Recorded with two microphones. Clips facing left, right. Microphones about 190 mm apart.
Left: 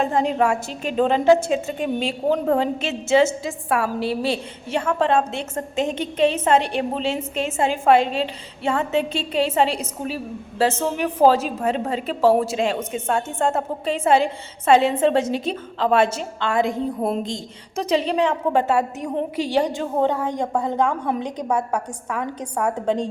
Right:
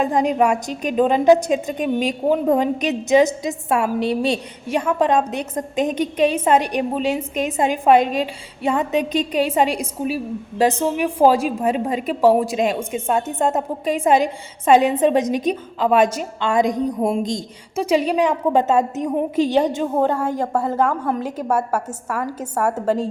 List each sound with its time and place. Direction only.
0.0 s a woman's voice: 15° right (ahead or behind)
20.0 s a woman's voice: 10° right (ahead or behind)